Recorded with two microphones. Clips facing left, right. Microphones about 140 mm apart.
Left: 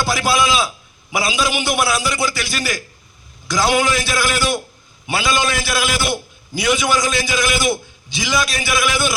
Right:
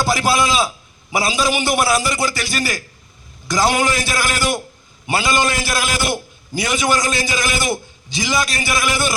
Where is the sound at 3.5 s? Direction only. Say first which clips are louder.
Even; 40° right (ahead or behind).